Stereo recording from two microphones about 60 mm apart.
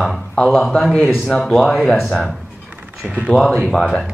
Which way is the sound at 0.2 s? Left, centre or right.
Centre.